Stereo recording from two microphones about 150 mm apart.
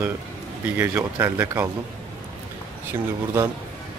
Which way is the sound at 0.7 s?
15° right (ahead or behind).